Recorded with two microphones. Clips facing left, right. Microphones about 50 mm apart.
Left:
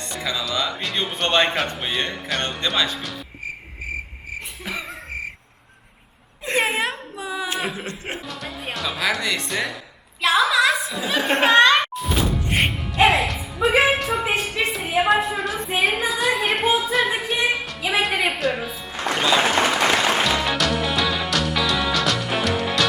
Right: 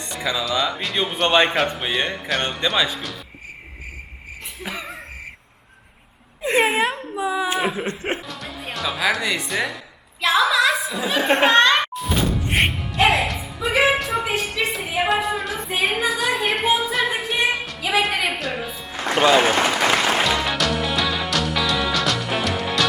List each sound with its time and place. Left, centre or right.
0.1 s a man's voice: centre
4.6 s a sound: centre
6.4 s wail: centre
7.9 s music: right
8.3 s music: centre
10.2 s chuckle: centre
12.5 s music: centre
13.8 s a sound: centre
20.2 s music: centre